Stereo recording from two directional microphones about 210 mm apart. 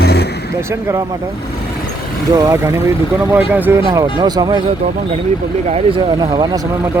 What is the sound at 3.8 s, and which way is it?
Speech, 20° right (ahead or behind).